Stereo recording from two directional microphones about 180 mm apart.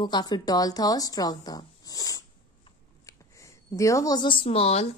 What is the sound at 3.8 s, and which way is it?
A woman's voice, 15° left (ahead or behind).